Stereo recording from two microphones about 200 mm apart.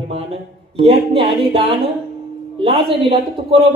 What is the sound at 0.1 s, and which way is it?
A man's voice, 30° right (ahead or behind).